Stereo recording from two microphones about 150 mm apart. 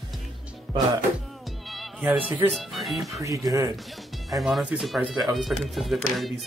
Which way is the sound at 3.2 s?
25° right (ahead or behind).